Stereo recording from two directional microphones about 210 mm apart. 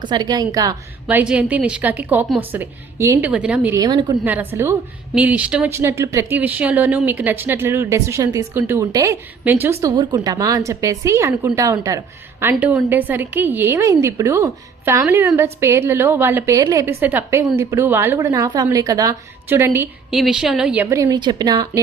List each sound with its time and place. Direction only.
0.0 s speech: 20° right (ahead or behind)
1.0 s a woman's voice: 5° right (ahead or behind)
3.8 s speech: 20° right (ahead or behind)
4.2 s a woman's voice: 10° right (ahead or behind)
20.9 s speech: 15° right (ahead or behind)